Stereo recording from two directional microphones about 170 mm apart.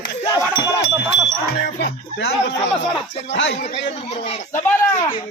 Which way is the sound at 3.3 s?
90° left.